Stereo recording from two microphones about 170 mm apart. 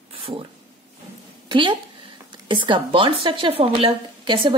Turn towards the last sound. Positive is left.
turn(degrees=-30)  # may be behind; listen again after turning